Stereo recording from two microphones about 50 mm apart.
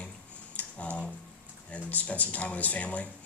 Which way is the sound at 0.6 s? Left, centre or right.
Left.